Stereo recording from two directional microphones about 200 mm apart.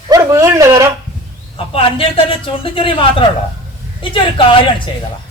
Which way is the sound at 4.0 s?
25° left (ahead or behind).